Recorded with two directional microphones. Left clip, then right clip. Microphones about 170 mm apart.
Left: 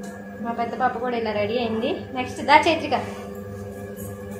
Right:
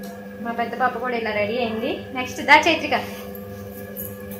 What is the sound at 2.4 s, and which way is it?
Speech, 20° right (ahead or behind).